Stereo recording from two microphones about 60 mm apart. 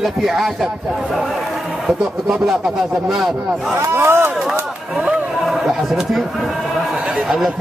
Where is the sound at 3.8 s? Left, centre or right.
Right.